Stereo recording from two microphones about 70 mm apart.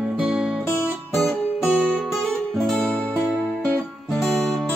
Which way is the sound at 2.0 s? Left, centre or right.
Centre.